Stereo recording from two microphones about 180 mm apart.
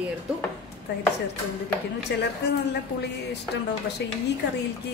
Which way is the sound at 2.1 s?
70° left (ahead or behind).